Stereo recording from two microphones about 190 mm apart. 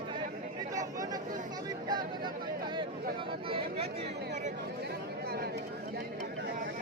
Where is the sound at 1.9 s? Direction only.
20° right (ahead or behind).